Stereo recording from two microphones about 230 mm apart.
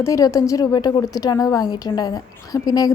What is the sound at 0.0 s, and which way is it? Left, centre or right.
A woman's voice, centre.